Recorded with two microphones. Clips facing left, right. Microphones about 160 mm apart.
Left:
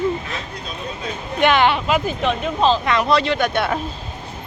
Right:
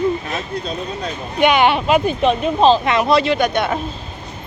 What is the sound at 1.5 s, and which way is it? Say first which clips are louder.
Speech: right 3 dB; 15° right (ahead or behind).